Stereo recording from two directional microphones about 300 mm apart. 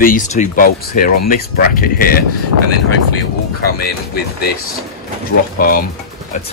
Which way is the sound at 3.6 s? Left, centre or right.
Left.